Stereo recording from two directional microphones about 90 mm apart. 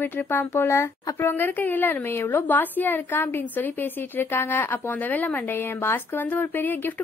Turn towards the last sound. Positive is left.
turn(degrees=20)  # may be behind; listen again after turning